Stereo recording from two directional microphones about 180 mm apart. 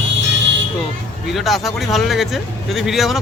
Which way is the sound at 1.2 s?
Centre (ahead or behind).